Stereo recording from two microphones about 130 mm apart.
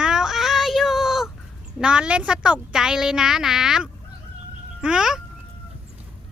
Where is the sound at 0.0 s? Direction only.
5° right (ahead or behind).